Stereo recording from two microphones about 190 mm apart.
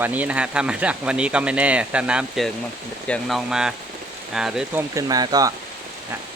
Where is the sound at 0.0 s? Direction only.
10° right (ahead or behind).